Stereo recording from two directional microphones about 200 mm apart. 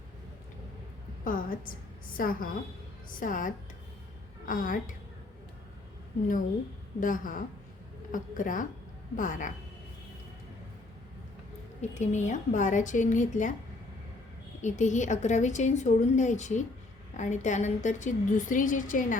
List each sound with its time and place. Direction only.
1.2 s a woman's voice: 45° left (ahead or behind)
7.0 s a woman's voice: 40° left (ahead or behind)
11.8 s a woman's voice: 35° left (ahead or behind)
14.6 s a woman's voice: 35° left (ahead or behind)